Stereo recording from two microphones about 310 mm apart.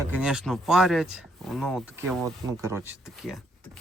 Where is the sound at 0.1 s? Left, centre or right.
Centre.